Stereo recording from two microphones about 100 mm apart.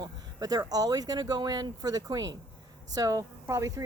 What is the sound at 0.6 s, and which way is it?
Speech, 40° right (ahead or behind).